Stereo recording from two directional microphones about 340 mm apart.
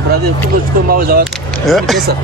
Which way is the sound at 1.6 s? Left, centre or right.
Centre.